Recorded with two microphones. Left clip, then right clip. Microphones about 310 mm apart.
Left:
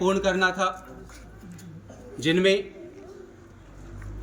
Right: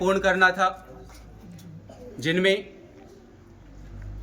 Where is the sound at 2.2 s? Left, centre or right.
Centre.